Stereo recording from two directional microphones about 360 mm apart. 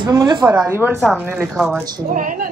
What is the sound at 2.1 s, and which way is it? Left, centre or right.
Speech, right.